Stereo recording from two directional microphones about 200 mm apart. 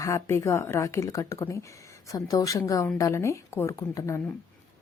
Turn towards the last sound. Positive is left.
turn(degrees=15)  # may be behind; listen again after turning